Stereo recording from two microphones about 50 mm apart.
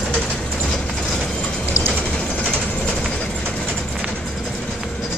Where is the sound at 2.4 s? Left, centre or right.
Centre.